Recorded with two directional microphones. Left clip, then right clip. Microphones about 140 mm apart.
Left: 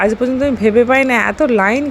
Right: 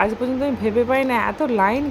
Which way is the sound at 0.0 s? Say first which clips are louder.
Left 6 dB; 30° left (ahead or behind).